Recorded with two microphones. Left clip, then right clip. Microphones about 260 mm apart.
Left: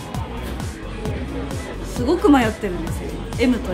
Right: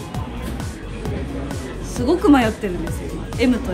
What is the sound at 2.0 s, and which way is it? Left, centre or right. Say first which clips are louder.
Speech: right 1 dB; centre.